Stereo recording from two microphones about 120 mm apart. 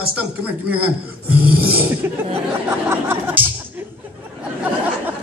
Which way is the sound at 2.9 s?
20° right (ahead or behind).